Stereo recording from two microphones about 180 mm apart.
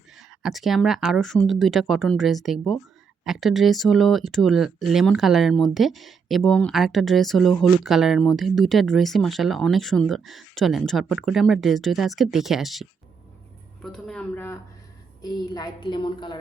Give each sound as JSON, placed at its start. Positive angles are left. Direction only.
{"t": 0.2, "sound": "speech", "side_deg": 0}
{"t": 15.2, "sound": "a woman's voice", "side_deg": 20}